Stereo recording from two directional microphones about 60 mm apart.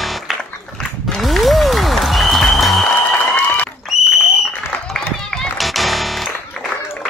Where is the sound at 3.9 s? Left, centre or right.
Centre.